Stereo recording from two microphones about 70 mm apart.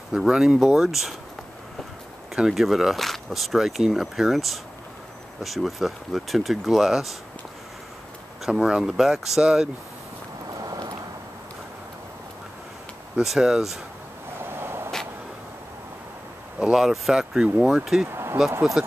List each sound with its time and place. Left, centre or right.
0.2 s speech: centre
2.3 s speech: centre
8.5 s speech: centre
10.6 s vehicle: right
13.2 s speech: centre
14.4 s a sound: right
16.7 s speech: centre
18.0 s speech: right
18.8 s speech: centre